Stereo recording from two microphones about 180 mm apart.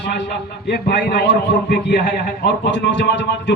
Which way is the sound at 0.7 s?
70° left (ahead or behind).